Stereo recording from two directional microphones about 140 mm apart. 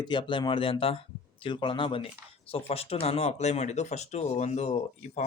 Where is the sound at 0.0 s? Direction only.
35° left (ahead or behind).